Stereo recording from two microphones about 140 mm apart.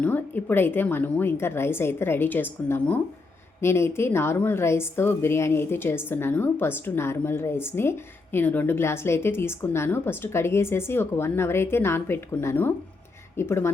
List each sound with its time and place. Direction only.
0.0 s a woman's voice: 10° left (ahead or behind)